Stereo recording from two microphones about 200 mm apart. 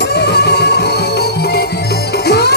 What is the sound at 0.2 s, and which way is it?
Music, 55° left (ahead or behind).